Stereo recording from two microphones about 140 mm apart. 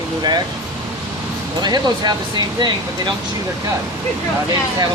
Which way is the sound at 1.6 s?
30° right (ahead or behind).